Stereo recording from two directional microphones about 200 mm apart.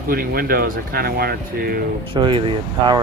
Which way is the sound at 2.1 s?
25° right (ahead or behind).